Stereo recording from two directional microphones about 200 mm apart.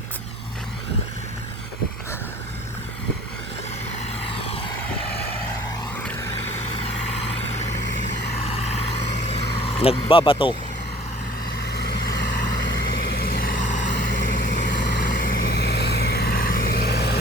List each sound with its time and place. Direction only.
4.4 s vehicle: 30° left (ahead or behind)
8.4 s vehicle: 30° left (ahead or behind)
11.6 s vehicle: 55° left (ahead or behind)